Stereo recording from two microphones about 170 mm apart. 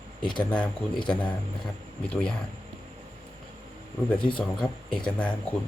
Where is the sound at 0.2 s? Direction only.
25° left (ahead or behind).